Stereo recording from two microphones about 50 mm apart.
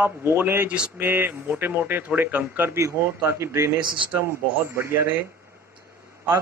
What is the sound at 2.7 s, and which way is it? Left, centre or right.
Speech, right.